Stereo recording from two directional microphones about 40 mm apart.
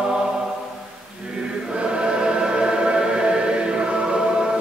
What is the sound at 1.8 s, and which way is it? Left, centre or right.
Choir, right.